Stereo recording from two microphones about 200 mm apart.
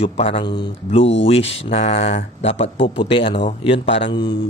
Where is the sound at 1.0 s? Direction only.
65° left (ahead or behind).